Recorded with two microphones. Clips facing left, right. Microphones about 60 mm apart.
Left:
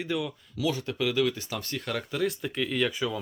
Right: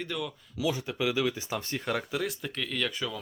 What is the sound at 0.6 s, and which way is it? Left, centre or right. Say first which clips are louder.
Speech: left 1 dB; centre.